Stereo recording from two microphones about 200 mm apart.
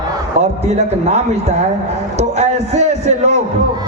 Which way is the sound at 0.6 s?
35° right (ahead or behind).